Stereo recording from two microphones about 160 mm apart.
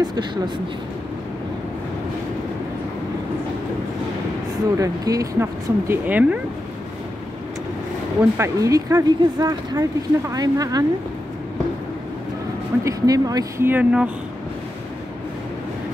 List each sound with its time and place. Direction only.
0.0 s speech: 25° right (ahead or behind)
4.7 s speech: 20° right (ahead or behind)
8.2 s speech: 20° right (ahead or behind)
12.8 s speech: 20° right (ahead or behind)